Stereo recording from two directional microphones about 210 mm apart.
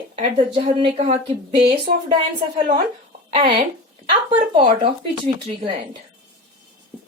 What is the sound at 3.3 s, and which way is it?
A woman's voice, 25° right (ahead or behind).